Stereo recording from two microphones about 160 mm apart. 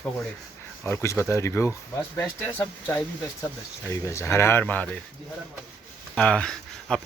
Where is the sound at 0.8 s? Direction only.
15° left (ahead or behind).